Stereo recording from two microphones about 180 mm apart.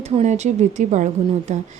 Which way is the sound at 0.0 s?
35° right (ahead or behind).